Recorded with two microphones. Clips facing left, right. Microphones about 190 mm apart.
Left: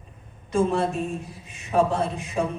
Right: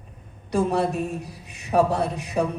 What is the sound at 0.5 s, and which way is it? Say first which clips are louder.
Speech: even; 70° right (ahead or behind).